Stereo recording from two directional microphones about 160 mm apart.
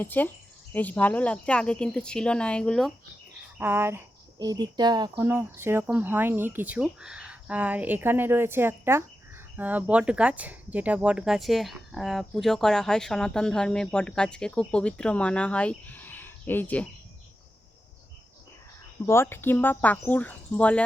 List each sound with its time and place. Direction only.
0.0 s speech: 10° left (ahead or behind)
3.6 s speech: 15° right (ahead or behind)
4.4 s speech: 25° right (ahead or behind)
5.2 s speech: 15° right (ahead or behind); by 16.9 s 10° left (ahead or behind)
19.0 s speech: 15° left (ahead or behind)